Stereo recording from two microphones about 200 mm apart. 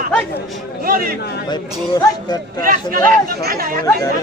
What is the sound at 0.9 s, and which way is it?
Speech, 45° right (ahead or behind).